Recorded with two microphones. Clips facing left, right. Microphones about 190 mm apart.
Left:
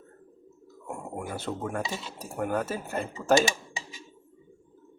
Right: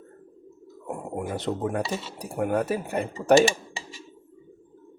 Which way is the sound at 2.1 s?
15° right (ahead or behind).